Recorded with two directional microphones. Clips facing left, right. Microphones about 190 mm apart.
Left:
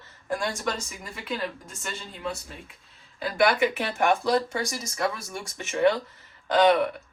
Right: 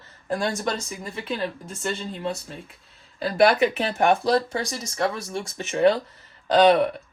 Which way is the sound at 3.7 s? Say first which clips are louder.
Right 3 dB; 30° right (ahead or behind).